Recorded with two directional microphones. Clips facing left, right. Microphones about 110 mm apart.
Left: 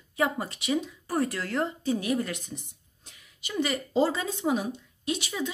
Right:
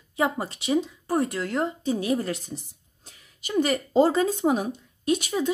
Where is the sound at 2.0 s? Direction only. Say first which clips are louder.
Right 3 dB; 30° right (ahead or behind).